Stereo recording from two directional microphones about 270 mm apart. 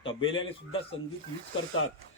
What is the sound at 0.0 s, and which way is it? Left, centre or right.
Speech, centre.